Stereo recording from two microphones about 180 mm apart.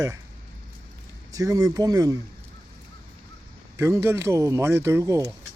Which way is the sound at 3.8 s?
15° right (ahead or behind).